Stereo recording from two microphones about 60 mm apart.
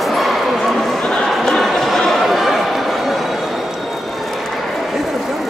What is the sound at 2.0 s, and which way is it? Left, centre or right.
Chatter, centre.